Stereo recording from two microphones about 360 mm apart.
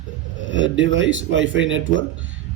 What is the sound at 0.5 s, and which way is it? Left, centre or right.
A man's voice, right.